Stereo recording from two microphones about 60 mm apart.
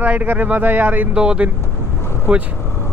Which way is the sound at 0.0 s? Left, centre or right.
Right.